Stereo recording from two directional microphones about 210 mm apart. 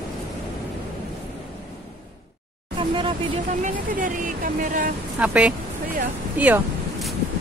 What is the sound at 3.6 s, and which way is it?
Music, 40° right (ahead or behind).